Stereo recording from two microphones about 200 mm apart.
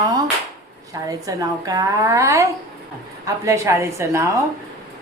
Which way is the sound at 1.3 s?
15° right (ahead or behind).